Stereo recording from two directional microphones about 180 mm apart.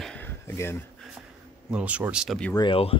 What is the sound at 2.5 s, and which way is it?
Speech, 30° left (ahead or behind).